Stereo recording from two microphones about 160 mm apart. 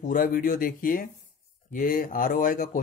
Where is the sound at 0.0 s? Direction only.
60° left (ahead or behind).